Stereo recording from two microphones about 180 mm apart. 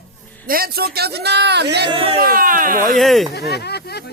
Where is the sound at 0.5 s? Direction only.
55° right (ahead or behind).